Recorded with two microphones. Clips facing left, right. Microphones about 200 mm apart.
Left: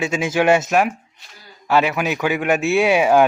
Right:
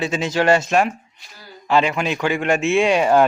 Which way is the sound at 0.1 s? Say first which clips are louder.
Left 1 dB; 5° left (ahead or behind).